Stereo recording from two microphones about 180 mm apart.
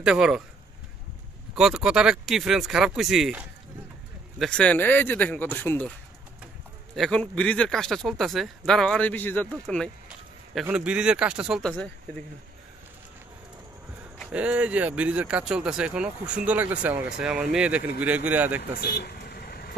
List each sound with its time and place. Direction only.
0.0 s speech: 5° right (ahead or behind)
1.5 s speech: 5° right (ahead or behind)
7.0 s speech: 5° left (ahead or behind)
10.0 s speech: 5° right (ahead or behind)
14.1 s speech: 5° right (ahead or behind)
18.6 s vehicle: 65° left (ahead or behind)